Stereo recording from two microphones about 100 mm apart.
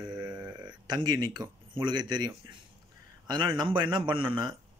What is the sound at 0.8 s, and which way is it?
Speech, 50° right (ahead or behind).